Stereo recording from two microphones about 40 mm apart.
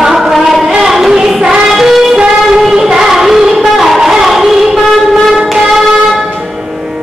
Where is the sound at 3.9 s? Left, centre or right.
Centre.